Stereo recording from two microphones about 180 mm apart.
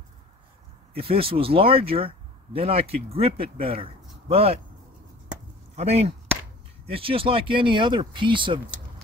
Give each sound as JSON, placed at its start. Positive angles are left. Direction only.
{"t": 0.9, "sound": "speech", "side_deg": -30}
{"t": 5.8, "sound": "speech", "side_deg": -35}